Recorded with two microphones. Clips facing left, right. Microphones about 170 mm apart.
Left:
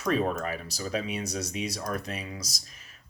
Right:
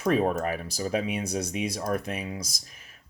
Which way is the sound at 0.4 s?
55° right (ahead or behind).